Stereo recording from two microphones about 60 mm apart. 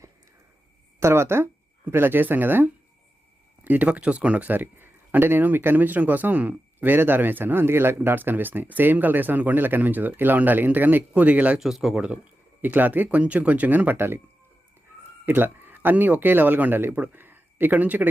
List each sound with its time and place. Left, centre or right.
0.9 s speech: right
11.6 s speech: centre
12.6 s speech: right
13.9 s speech: right
15.3 s speech: right
16.9 s speech: right
17.2 s speech: right